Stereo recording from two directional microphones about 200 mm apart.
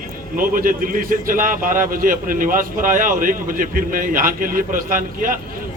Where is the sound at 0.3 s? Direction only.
45° right (ahead or behind).